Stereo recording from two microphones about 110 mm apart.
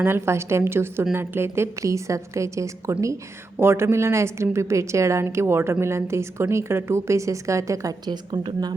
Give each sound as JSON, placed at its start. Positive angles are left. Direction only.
{"t": 0.0, "sound": "a woman's voice", "side_deg": -25}